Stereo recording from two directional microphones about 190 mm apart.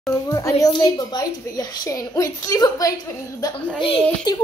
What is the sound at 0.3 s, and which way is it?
A woman's voice, 15° left (ahead or behind).